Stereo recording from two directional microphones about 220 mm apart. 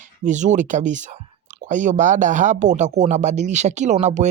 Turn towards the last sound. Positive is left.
turn(degrees=-30)  # may be behind; listen again after turning